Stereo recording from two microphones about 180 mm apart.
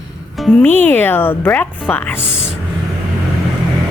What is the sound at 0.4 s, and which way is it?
Speech, 5° left (ahead or behind).